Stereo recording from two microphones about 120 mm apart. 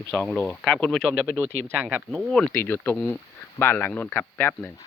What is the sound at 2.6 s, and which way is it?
Speech, 15° left (ahead or behind).